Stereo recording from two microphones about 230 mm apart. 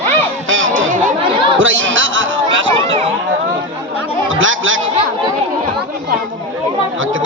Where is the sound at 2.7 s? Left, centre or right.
Right.